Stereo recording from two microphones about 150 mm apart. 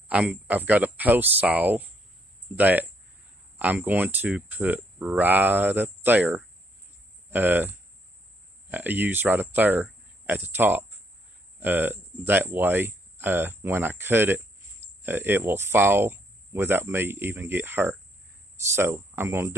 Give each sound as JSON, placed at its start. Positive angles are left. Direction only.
{"t": 0.1, "sound": "speech", "side_deg": -10}